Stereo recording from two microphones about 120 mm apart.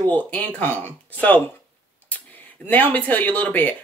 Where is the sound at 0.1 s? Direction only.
15° left (ahead or behind).